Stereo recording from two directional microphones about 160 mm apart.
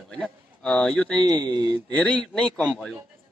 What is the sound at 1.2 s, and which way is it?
Speech, 30° right (ahead or behind).